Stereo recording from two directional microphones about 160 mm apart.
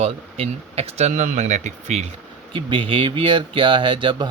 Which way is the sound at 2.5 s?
35° right (ahead or behind).